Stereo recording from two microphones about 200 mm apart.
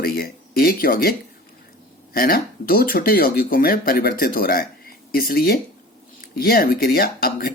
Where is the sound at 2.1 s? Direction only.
45° left (ahead or behind).